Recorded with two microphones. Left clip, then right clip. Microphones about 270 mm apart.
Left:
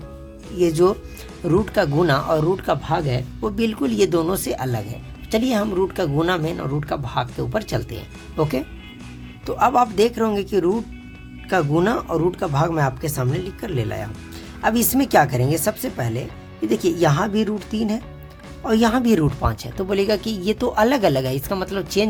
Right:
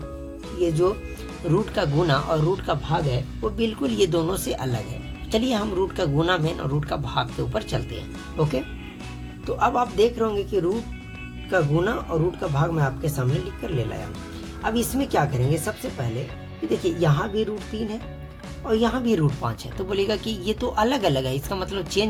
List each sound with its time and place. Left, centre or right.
0.6 s speech: left
11.7 s speech: left